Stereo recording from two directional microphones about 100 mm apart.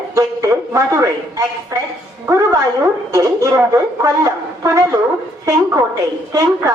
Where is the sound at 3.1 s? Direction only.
35° right (ahead or behind).